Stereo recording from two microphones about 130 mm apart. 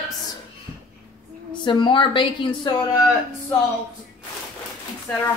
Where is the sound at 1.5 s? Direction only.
40° left (ahead or behind).